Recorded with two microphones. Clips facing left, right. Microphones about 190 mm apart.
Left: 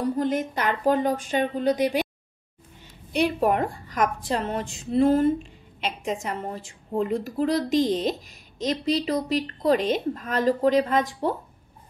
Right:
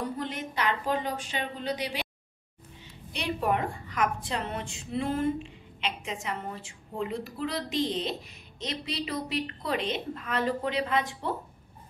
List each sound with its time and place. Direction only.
0.2 s a woman's voice: 45° left (ahead or behind)
3.1 s a woman's voice: 45° left (ahead or behind)